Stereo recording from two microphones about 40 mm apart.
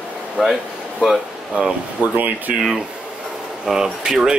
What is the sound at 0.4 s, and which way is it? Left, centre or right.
Speech, centre.